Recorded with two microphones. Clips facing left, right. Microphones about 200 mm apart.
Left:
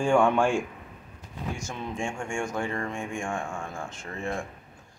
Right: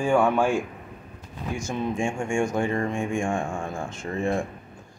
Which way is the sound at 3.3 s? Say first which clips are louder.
Right 5 dB; 25° right (ahead or behind).